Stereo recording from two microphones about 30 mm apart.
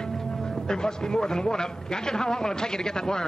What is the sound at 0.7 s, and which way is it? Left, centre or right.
Speech, left.